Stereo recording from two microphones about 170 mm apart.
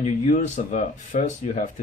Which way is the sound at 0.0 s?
45° left (ahead or behind).